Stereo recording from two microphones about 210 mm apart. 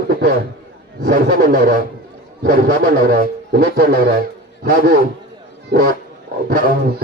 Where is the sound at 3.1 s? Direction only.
45° right (ahead or behind).